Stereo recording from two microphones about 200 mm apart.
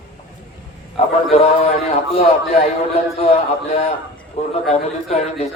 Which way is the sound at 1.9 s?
30° left (ahead or behind).